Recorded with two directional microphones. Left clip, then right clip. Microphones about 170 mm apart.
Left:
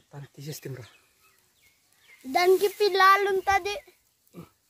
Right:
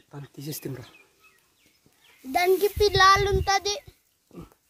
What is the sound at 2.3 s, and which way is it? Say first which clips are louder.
A child's voice: even; 40° left (ahead or behind).